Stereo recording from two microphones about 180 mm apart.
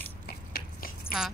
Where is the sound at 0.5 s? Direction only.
60° left (ahead or behind).